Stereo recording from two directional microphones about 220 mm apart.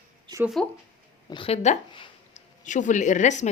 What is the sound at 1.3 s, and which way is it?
A woman's voice, 25° left (ahead or behind).